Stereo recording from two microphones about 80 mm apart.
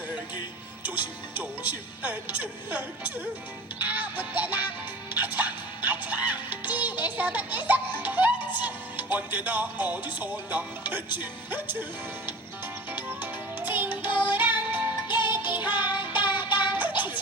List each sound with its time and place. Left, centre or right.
0.8 s music: right